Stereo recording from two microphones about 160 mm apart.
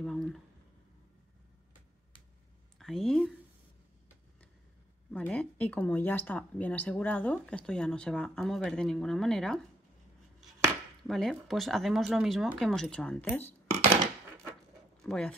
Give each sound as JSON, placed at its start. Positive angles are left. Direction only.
{"t": 0.0, "sound": "speech", "side_deg": 5}
{"t": 2.8, "sound": "speech", "side_deg": 0}
{"t": 5.1, "sound": "speech", "side_deg": 5}
{"t": 11.1, "sound": "speech", "side_deg": 0}
{"t": 15.0, "sound": "speech", "side_deg": 5}